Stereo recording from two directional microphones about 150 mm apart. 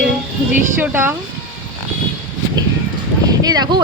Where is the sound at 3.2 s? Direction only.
25° right (ahead or behind).